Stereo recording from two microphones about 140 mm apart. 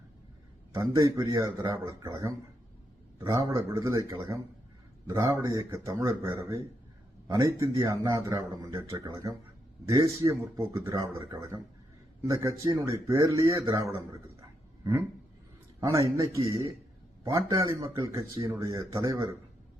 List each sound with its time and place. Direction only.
0.7 s speech: 25° right (ahead or behind)
15.8 s speech: 20° right (ahead or behind)
18.1 s speech: 35° right (ahead or behind)
18.4 s speech: 20° right (ahead or behind)